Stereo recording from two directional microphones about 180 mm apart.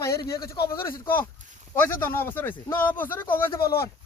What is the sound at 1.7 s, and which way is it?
Speech, 10° left (ahead or behind).